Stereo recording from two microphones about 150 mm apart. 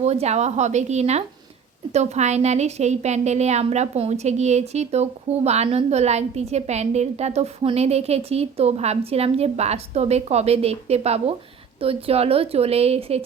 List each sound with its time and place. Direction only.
0.0 s a woman's voice: 45° right (ahead or behind)